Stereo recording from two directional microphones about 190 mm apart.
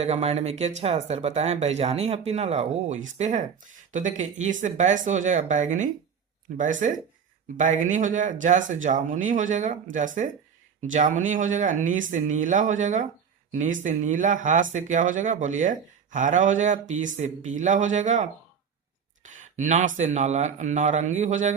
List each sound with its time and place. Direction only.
0.0 s speech: 35° right (ahead or behind)
19.2 s a sound: 40° right (ahead or behind)
20.0 s speech: 40° right (ahead or behind)